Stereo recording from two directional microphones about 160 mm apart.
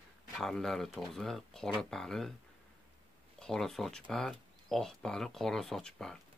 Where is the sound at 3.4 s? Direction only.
5° left (ahead or behind).